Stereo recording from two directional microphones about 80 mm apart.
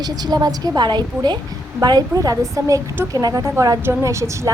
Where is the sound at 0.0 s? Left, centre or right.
Right.